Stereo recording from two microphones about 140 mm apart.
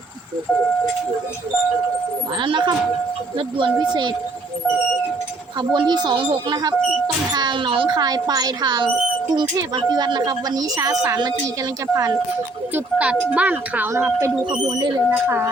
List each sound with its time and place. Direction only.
2.4 s speech: 35° right (ahead or behind)
5.5 s speech: 30° right (ahead or behind)
12.7 s speech: 10° right (ahead or behind)
14.5 s speech: 35° right (ahead or behind)
15.1 s speech: 15° right (ahead or behind)